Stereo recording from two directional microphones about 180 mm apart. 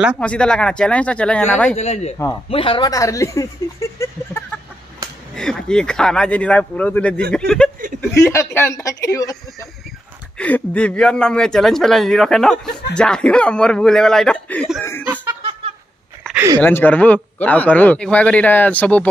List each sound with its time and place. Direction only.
0.2 s speech: 5° left (ahead or behind)
1.8 s speech: 40° left (ahead or behind); by 3.4 s 15° left (ahead or behind)
4.0 s a sound: 10° left (ahead or behind)
5.3 s speech: 5° left (ahead or behind)
8.2 s a man's voice: 15° left (ahead or behind)
10.3 s speech: 10° left (ahead or behind)
16.3 s speech: 20° right (ahead or behind)
16.6 s a man's voice: 10° left (ahead or behind)